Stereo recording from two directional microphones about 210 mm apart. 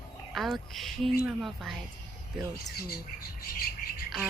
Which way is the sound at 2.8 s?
45° left (ahead or behind).